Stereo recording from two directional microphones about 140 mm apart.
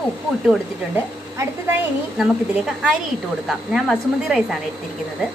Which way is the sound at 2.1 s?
5° right (ahead or behind).